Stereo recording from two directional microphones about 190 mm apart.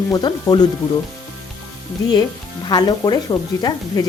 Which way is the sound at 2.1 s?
20° left (ahead or behind).